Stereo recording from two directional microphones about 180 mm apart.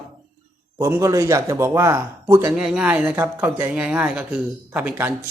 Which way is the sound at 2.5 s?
5° right (ahead or behind).